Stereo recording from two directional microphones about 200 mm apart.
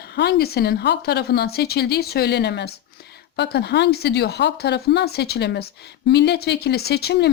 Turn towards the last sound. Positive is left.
turn(degrees=55)  # may be behind; listen again after turning